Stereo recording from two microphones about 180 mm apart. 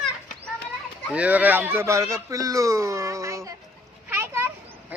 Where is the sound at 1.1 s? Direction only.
10° right (ahead or behind).